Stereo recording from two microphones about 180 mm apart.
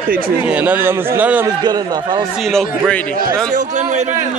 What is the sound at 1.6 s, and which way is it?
Speech, 20° right (ahead or behind).